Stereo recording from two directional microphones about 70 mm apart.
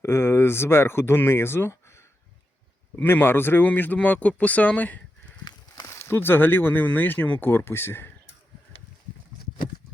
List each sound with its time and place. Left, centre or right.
0.0 s speech: left
2.9 s speech: left
5.5 s a sound: left
5.9 s speech: left